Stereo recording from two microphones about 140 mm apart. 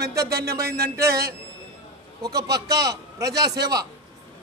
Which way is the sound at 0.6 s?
90° right.